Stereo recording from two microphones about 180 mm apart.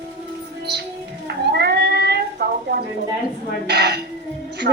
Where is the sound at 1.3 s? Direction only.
65° right (ahead or behind).